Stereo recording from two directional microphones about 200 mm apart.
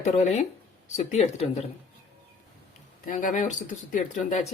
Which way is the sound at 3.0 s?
40° left (ahead or behind).